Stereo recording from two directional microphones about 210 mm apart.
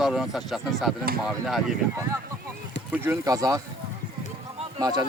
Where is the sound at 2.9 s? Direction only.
10° right (ahead or behind).